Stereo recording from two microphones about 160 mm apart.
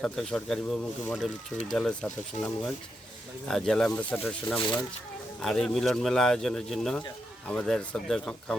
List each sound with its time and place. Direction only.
0.0 s speech: 5° left (ahead or behind)
4.6 s speech: 25° left (ahead or behind)
5.4 s speech: centre (ahead or behind)